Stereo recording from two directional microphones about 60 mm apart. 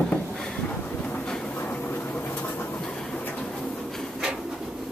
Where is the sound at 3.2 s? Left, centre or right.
Left.